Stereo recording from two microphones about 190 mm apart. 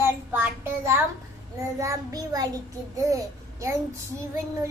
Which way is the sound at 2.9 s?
15° right (ahead or behind).